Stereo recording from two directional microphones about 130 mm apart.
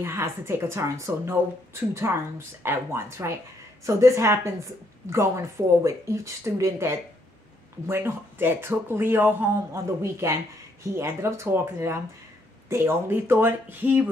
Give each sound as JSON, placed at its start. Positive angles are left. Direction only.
{"t": 0.0, "sound": "a woman's voice", "side_deg": -20}